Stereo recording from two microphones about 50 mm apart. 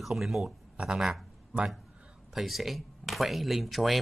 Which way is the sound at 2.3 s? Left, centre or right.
Centre.